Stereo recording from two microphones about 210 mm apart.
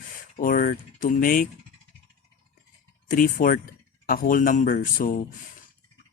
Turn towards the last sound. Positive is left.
turn(degrees=40)  # may be behind; listen again after turning